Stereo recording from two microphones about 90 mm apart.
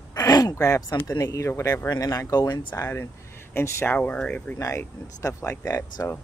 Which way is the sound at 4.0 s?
15° left (ahead or behind).